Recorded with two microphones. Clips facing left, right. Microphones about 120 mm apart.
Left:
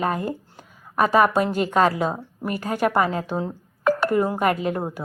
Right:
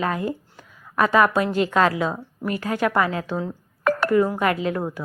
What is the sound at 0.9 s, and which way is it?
Speech, 40° left (ahead or behind).